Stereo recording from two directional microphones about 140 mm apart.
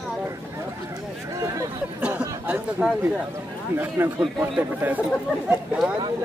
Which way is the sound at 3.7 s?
15° right (ahead or behind).